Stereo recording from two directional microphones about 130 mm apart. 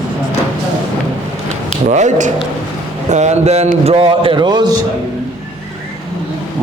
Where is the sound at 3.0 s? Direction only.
60° right (ahead or behind); by 4.7 s 35° right (ahead or behind).